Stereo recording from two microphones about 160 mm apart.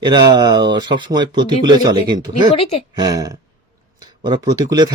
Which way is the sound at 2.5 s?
35° left (ahead or behind).